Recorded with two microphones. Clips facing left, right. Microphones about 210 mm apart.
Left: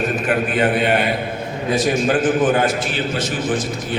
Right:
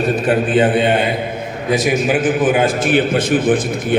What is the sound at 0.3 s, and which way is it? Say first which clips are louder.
Speech: right 5 dB; 30° right (ahead or behind).